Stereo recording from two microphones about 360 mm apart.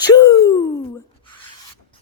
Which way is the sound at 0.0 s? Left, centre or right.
Centre.